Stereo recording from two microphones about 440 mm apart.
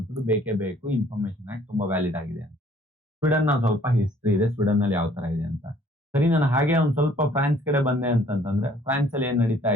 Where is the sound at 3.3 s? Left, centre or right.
Centre.